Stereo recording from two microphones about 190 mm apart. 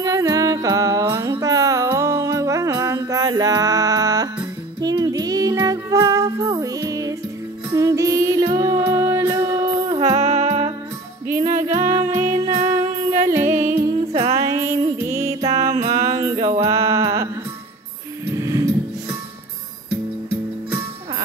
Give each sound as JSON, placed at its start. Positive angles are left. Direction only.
{"t": 0.0, "sound": "music", "side_deg": -20}
{"t": 10.0, "sound": "music", "side_deg": -35}
{"t": 11.8, "sound": "music", "side_deg": -35}
{"t": 14.3, "sound": "music", "side_deg": -15}
{"t": 18.3, "sound": "music", "side_deg": -15}